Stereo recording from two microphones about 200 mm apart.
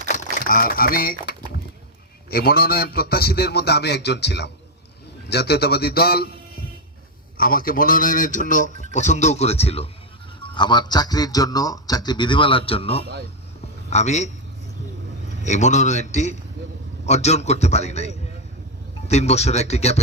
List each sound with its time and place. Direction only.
0.0 s a man's voice: 40° left (ahead or behind)
7.3 s a man's voice: 45° left (ahead or behind)
15.4 s a man's voice: 35° left (ahead or behind)